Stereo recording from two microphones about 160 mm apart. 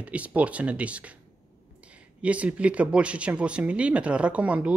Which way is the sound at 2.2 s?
10° right (ahead or behind).